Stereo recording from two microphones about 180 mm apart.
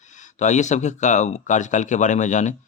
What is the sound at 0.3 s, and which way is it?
Speech, 40° left (ahead or behind).